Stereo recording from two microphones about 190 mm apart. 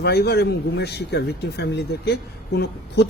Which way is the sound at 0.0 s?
60° left (ahead or behind).